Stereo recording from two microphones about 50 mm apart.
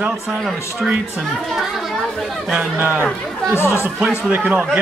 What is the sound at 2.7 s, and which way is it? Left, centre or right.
Speech, right.